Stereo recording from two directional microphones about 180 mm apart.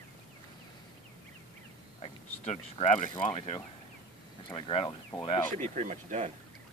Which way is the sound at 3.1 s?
30° left (ahead or behind).